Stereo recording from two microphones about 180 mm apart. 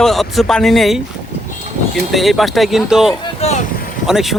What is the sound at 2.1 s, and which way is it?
Speech, centre (ahead or behind).